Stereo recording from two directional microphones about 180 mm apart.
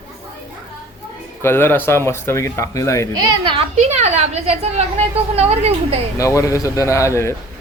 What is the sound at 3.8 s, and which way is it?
A woman's voice, 40° right (ahead or behind).